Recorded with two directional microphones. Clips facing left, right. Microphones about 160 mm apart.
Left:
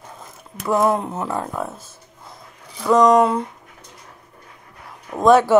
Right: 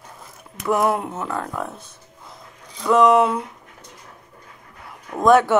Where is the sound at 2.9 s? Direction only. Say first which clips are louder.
Left 1 dB; 5° right (ahead or behind).